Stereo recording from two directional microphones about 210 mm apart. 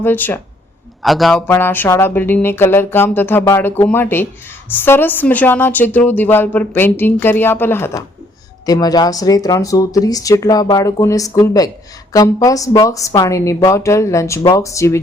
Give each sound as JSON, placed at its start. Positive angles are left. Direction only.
{"t": 0.0, "sound": "a woman's voice", "side_deg": 10}